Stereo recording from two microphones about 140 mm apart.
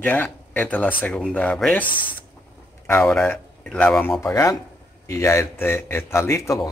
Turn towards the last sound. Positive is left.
turn(degrees=20)  # may be behind; listen again after turning